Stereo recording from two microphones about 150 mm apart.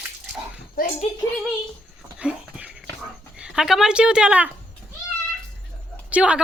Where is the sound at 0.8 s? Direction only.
70° left (ahead or behind).